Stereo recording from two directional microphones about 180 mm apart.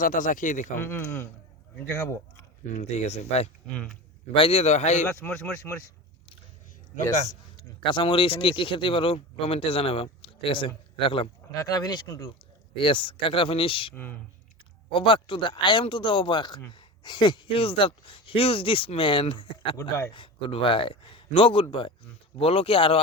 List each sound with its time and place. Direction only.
0.0 s speech: 45° left (ahead or behind)
0.8 s speech: 10° left (ahead or behind)
2.7 s speech: 40° left (ahead or behind)
3.7 s speech: 5° left (ahead or behind)
4.4 s speech: 30° left (ahead or behind)
5.2 s speech: 10° left (ahead or behind)
7.9 s speech: 25° left (ahead or behind)
13.9 s speech: 10° left (ahead or behind)
14.9 s speech: 25° left (ahead or behind)